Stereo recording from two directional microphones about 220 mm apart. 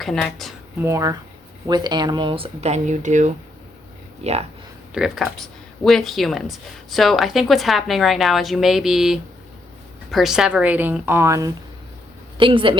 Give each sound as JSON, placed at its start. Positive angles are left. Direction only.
{"t": 0.0, "sound": "speech", "side_deg": 0}
{"t": 0.8, "sound": "speech", "side_deg": -15}
{"t": 4.9, "sound": "a woman's voice", "side_deg": 0}